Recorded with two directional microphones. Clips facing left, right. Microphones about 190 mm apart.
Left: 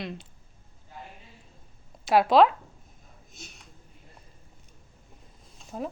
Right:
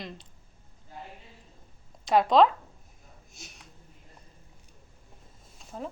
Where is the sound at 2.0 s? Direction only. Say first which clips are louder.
Left 1 dB; 5° left (ahead or behind).